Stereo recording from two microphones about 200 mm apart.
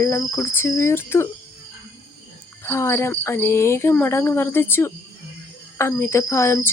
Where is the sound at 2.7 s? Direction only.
10° left (ahead or behind).